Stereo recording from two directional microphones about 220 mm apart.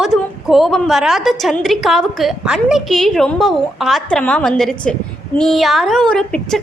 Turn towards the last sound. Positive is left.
turn(degrees=5)  # may be behind; listen again after turning